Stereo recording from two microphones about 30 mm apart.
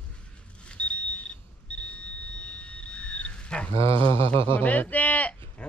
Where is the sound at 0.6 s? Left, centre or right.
Left.